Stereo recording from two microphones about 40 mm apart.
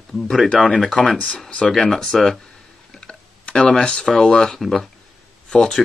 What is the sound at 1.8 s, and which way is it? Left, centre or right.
Speech, centre.